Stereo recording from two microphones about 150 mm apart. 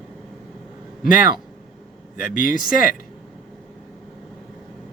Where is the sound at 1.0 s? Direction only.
65° left (ahead or behind).